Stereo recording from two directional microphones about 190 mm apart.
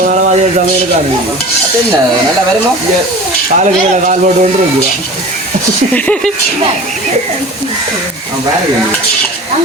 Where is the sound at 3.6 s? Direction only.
40° right (ahead or behind).